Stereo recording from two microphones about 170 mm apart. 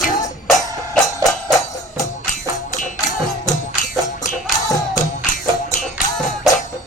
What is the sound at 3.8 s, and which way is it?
Music, 50° left (ahead or behind).